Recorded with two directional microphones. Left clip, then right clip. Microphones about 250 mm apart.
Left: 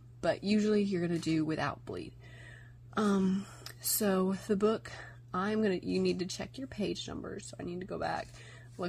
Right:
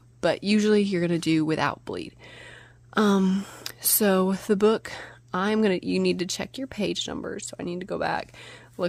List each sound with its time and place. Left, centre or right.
0.2 s speech: right